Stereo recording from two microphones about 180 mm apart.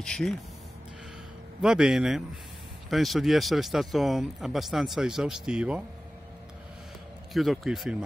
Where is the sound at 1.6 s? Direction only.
5° right (ahead or behind).